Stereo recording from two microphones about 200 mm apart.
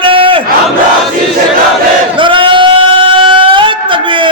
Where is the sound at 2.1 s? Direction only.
25° right (ahead or behind).